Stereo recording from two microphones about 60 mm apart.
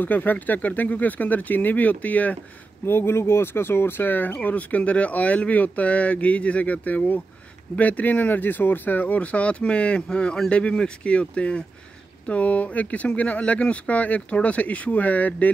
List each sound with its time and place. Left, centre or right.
0.0 s speech: left
2.8 s speech: left